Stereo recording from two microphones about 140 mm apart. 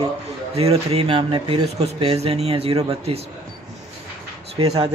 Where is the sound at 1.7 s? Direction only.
45° right (ahead or behind).